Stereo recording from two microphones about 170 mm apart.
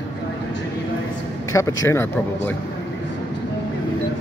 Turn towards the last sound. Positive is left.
turn(degrees=15)  # may be behind; listen again after turning